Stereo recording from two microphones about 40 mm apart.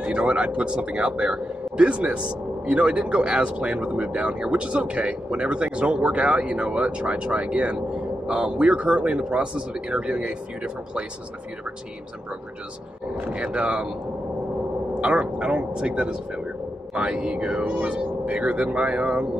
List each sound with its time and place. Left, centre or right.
0.0 s speech: right
13.2 s speech: right
15.0 s speech: right